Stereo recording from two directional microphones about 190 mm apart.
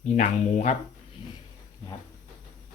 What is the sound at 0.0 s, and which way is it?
Speech, 35° left (ahead or behind).